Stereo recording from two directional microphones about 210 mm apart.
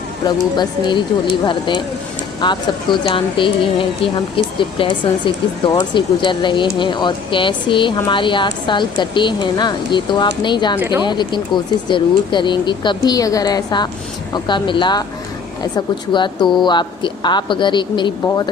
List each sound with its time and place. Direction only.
0.5 s speech: 20° left (ahead or behind)
10.8 s speech: 10° right (ahead or behind)
11.0 s speech: 20° left (ahead or behind)